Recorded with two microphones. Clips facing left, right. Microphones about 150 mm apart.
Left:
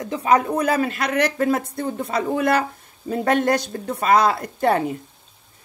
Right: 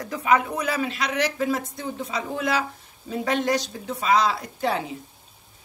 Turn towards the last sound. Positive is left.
turn(degrees=55)  # may be behind; listen again after turning